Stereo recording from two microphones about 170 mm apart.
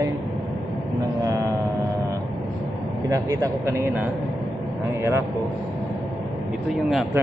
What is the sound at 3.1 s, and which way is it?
A man's voice, 20° right (ahead or behind).